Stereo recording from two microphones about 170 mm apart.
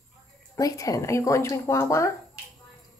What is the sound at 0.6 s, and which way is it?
Speech, 20° left (ahead or behind).